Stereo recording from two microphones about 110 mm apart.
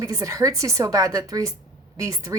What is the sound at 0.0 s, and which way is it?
A woman's voice, 30° right (ahead or behind).